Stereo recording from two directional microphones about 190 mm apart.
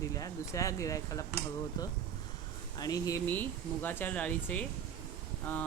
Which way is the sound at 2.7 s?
20° left (ahead or behind).